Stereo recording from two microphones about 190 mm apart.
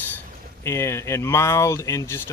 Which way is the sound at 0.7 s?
15° left (ahead or behind).